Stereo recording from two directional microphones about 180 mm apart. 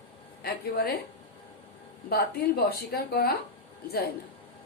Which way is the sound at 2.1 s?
60° left (ahead or behind).